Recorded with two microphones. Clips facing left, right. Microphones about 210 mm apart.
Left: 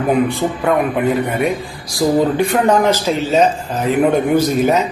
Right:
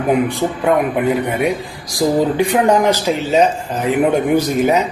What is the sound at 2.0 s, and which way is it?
Speech, 15° right (ahead or behind).